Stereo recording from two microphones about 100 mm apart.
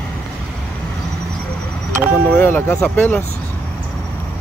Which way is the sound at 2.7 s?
10° left (ahead or behind).